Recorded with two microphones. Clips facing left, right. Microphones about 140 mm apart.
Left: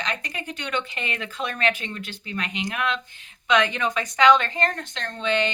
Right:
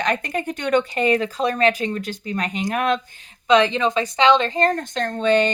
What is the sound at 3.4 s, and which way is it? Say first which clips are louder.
Speech: right 6 dB; 30° right (ahead or behind).